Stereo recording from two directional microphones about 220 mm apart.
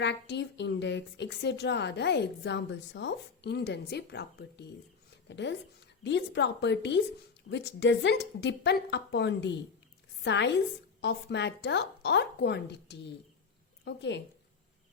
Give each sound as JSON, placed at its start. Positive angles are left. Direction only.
{"t": 0.0, "sound": "a woman's voice", "side_deg": 50}